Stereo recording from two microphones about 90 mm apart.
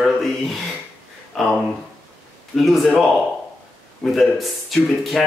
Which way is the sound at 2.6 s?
Centre (ahead or behind).